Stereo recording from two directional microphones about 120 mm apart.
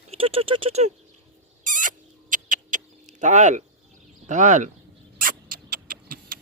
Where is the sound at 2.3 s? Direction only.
90° right.